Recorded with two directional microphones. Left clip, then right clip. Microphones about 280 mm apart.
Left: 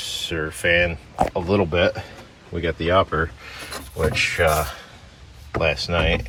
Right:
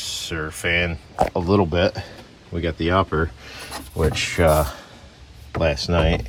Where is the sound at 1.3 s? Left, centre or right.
Right.